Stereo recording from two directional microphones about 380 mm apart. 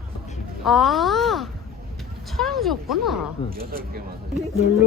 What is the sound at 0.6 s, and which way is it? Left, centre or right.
A child's voice, centre.